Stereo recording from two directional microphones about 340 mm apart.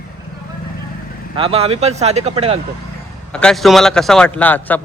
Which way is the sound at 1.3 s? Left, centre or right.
Centre.